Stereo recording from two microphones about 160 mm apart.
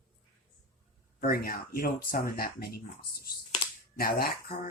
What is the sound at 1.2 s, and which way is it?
Speech, 70° left (ahead or behind).